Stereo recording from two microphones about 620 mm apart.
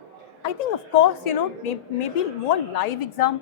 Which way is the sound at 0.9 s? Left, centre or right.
Left.